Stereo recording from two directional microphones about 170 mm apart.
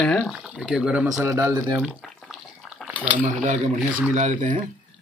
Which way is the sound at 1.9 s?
Centre (ahead or behind).